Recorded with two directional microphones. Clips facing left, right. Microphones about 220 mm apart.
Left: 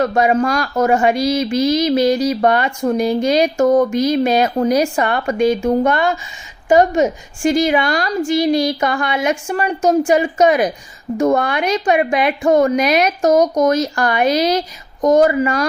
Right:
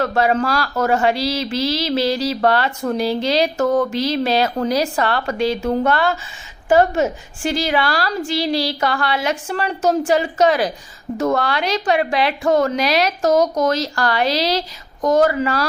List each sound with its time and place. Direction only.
0.0 s a woman's voice: 15° left (ahead or behind)